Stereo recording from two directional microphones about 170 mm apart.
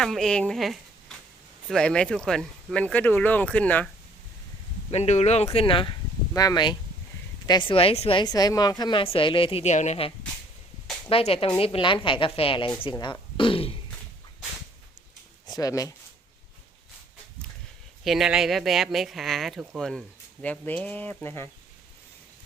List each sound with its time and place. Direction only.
0.0 s speech: centre (ahead or behind)
4.9 s a woman's voice: 40° left (ahead or behind)
11.1 s a woman's voice: 35° left (ahead or behind)
15.4 s speech: 20° left (ahead or behind)
18.0 s speech: centre (ahead or behind); by 21.5 s 15° left (ahead or behind)